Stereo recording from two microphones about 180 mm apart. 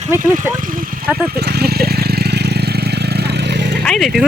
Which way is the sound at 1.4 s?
65° right (ahead or behind).